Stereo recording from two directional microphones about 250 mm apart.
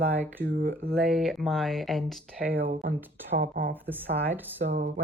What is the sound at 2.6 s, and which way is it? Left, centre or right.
Speech, right.